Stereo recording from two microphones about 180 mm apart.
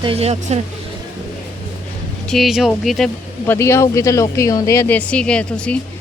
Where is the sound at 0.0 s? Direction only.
35° right (ahead or behind).